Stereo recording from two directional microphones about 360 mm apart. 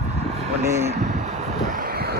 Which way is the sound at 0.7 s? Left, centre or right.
Centre.